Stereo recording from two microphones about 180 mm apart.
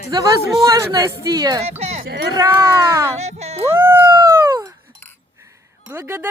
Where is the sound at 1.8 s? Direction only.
35° right (ahead or behind).